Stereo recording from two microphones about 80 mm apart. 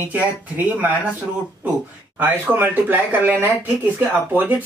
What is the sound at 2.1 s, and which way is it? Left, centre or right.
Speech, right.